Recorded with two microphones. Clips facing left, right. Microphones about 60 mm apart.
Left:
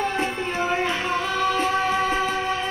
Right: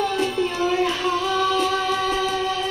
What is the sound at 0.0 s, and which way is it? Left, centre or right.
Music, left.